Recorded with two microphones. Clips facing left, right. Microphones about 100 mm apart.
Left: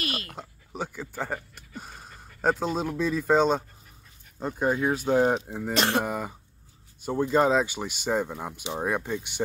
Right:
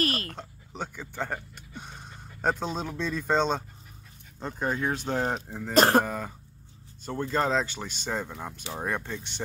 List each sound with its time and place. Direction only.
0.0 s a sound: 40° right (ahead or behind)
0.3 s speech: 5° left (ahead or behind)
5.8 s speech: 40° right (ahead or behind)
6.0 s speech: 10° left (ahead or behind)